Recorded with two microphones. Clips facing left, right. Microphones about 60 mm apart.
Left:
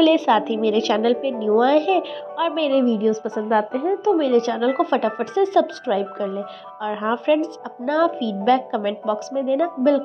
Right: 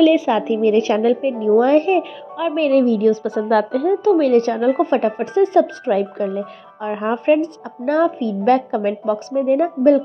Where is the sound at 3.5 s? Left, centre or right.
Right.